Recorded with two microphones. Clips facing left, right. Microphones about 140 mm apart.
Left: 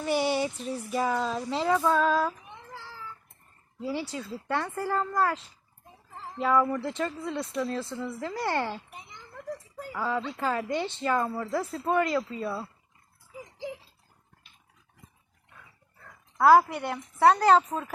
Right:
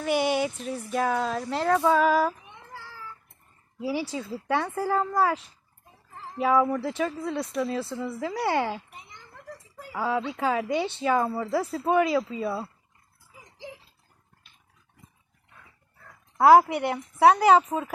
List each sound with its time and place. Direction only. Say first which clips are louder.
0.0 s speech: right 2 dB; centre (ahead or behind)
3.8 s speech: right 3 dB; 10° right (ahead or behind)
16.5 s speech: right 3 dB; 15° right (ahead or behind)